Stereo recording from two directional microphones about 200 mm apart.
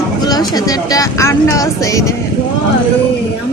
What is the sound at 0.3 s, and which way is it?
A woman's voice, 20° left (ahead or behind).